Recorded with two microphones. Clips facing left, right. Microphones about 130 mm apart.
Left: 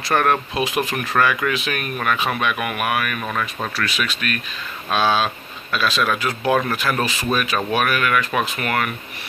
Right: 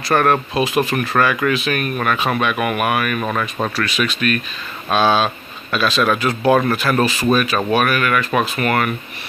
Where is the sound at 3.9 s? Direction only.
5° left (ahead or behind).